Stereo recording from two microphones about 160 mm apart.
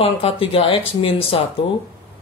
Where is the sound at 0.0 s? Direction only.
35° left (ahead or behind).